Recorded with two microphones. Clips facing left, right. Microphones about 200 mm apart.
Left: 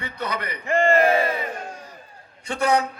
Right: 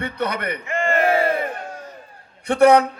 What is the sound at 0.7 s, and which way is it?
Battle cry, 35° left (ahead or behind).